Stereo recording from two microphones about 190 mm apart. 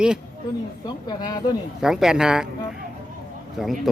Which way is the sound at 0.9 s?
20° left (ahead or behind).